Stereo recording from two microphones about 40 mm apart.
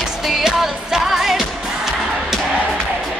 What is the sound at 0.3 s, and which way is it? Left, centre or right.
Music, centre.